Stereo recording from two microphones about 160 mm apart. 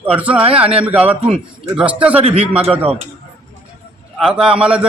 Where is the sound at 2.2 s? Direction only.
40° right (ahead or behind).